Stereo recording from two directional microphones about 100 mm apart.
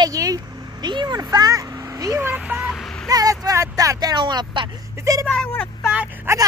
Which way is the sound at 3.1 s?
40° right (ahead or behind).